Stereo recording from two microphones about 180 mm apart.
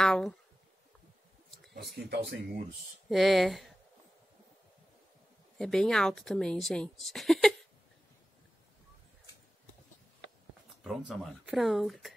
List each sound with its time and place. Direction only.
0.0 s a sound: 5° left (ahead or behind)
2.0 s speech: 65° right (ahead or behind)
3.1 s speech: centre (ahead or behind)
5.6 s speech: 5° left (ahead or behind)
11.1 s speech: centre (ahead or behind)